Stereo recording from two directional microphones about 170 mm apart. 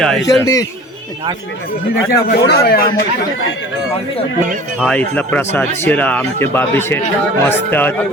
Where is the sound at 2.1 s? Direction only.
65° left (ahead or behind).